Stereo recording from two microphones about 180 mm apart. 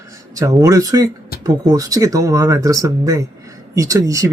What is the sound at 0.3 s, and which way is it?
Speech, 20° right (ahead or behind).